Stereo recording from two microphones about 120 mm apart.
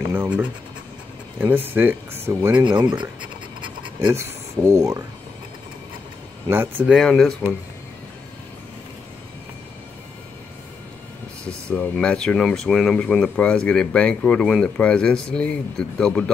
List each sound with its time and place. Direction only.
0.1 s speech: 15° right (ahead or behind)
2.6 s speech: 35° right (ahead or behind)
4.1 s speech: 25° right (ahead or behind)
6.5 s speech: 20° right (ahead or behind)
6.9 s speech: 5° left (ahead or behind)
11.7 s speech: 5° left (ahead or behind)